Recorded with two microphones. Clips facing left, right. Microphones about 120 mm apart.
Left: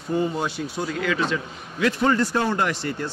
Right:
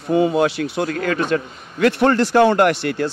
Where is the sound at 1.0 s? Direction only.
50° right (ahead or behind); by 3.1 s 70° right (ahead or behind).